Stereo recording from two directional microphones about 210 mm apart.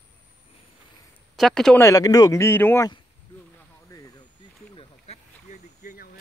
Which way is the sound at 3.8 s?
15° left (ahead or behind).